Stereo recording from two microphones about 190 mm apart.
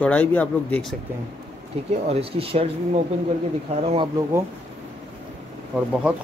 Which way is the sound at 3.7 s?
30° right (ahead or behind).